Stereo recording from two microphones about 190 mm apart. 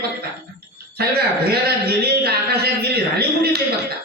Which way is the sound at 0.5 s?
55° right (ahead or behind).